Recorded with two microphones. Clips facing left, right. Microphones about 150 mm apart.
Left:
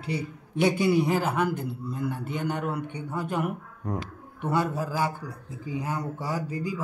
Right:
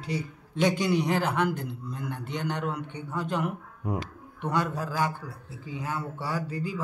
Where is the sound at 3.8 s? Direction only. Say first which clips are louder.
Right 1 dB; 10° right (ahead or behind).